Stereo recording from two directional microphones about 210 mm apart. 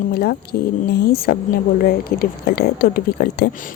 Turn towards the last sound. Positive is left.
turn(degrees=50)  # may be behind; listen again after turning